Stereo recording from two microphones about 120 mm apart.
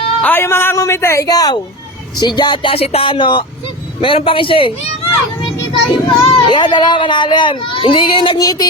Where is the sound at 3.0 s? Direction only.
40° left (ahead or behind).